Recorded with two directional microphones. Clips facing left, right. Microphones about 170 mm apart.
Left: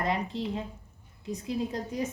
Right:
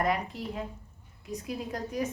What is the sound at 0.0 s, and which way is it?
A woman's voice, 25° left (ahead or behind).